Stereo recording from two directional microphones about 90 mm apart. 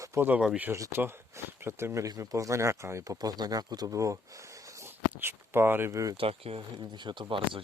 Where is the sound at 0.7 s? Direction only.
30° right (ahead or behind).